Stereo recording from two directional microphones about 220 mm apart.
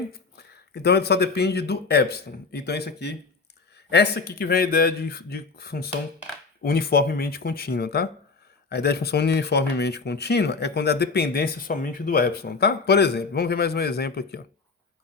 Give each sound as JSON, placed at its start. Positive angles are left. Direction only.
{"t": 0.1, "sound": "speech", "side_deg": 45}